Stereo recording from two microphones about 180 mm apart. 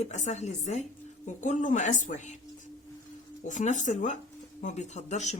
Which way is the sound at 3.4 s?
45° left (ahead or behind).